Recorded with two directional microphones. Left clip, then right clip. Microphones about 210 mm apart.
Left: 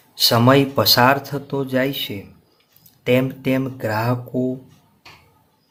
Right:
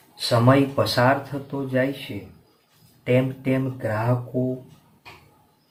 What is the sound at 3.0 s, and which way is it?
Speech, 50° left (ahead or behind).